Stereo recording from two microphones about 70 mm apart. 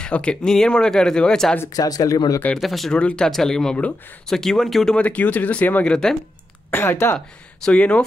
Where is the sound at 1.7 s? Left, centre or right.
Left.